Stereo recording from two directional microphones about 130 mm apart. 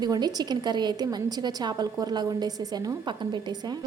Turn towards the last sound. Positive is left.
turn(degrees=-35)  # may be behind; listen again after turning